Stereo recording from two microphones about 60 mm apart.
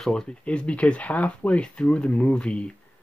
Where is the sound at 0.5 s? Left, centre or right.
Centre.